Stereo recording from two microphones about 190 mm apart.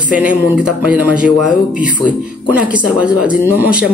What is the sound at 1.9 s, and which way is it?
Speech, 45° left (ahead or behind).